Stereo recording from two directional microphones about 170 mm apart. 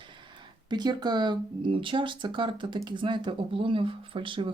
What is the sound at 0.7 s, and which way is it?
Speech, 25° right (ahead or behind).